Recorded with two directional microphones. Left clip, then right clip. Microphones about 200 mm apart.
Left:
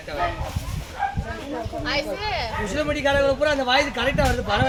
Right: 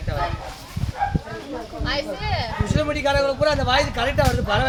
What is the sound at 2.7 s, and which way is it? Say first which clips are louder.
Speech: right 1 dB; centre (ahead or behind).